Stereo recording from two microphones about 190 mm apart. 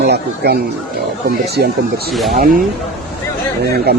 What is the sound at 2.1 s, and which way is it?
Speech, centre (ahead or behind).